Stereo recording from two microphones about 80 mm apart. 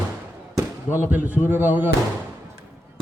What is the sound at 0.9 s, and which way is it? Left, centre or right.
Speech, left.